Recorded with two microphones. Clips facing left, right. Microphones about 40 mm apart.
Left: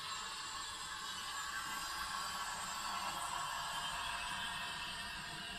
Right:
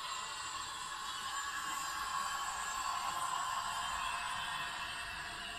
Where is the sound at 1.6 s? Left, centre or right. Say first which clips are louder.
Right 4 dB; right.